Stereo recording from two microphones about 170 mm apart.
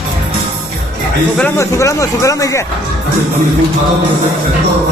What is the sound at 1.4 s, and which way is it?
Speech, 15° left (ahead or behind).